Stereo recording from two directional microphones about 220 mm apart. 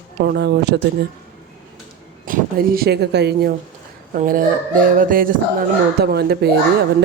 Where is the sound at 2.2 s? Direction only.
40° right (ahead or behind).